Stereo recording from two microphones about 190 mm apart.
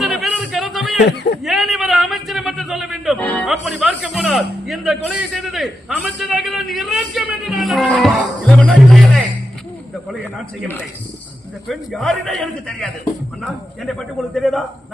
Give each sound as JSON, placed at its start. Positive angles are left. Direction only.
{"t": 0.0, "sound": "music", "side_deg": 0}
{"t": 1.0, "sound": "speech", "side_deg": 60}
{"t": 1.5, "sound": "music", "side_deg": 0}
{"t": 3.5, "sound": "a man's voice", "side_deg": 0}
{"t": 11.7, "sound": "a man's voice", "side_deg": 0}
{"t": 14.3, "sound": "a man's voice", "side_deg": 0}